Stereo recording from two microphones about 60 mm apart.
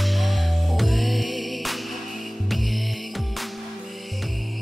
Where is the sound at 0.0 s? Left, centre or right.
Centre.